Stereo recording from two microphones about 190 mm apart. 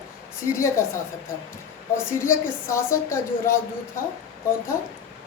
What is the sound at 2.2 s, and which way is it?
A woman's voice, 15° left (ahead or behind).